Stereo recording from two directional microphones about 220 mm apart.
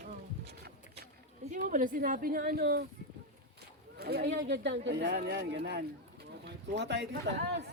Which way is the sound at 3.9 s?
45° right (ahead or behind).